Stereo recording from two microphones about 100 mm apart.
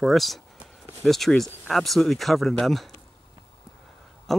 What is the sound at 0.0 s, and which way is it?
Speech, centre (ahead or behind).